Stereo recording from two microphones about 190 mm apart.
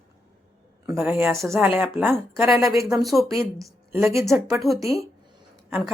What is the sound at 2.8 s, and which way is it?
Speech, centre (ahead or behind).